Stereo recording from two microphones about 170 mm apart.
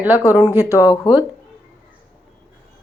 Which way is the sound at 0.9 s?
25° left (ahead or behind).